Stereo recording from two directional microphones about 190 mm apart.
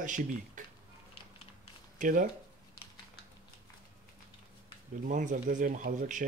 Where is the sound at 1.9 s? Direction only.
45° right (ahead or behind).